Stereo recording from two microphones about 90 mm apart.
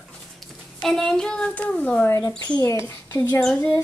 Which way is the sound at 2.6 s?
30° left (ahead or behind).